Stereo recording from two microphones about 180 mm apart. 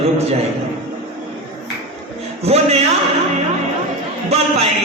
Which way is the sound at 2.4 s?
35° right (ahead or behind).